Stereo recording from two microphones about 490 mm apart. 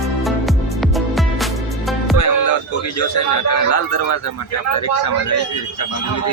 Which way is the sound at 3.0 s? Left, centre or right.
Left.